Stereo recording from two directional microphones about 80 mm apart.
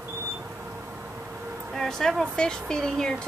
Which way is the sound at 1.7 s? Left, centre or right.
Centre.